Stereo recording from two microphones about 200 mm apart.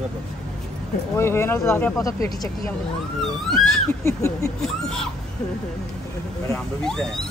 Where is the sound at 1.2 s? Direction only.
10° left (ahead or behind).